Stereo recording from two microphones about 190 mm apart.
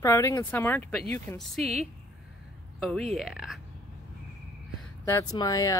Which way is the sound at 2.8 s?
Centre (ahead or behind).